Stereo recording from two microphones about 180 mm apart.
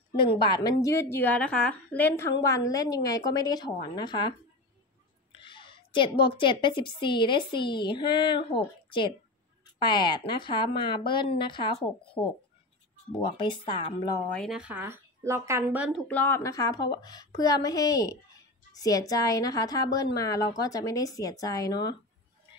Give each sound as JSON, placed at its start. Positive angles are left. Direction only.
{"t": 0.2, "sound": "a woman's voice", "side_deg": 25}
{"t": 5.4, "sound": "a woman's voice", "side_deg": 25}
{"t": 14.3, "sound": "speech", "side_deg": 0}
{"t": 16.1, "sound": "a woman's voice", "side_deg": 10}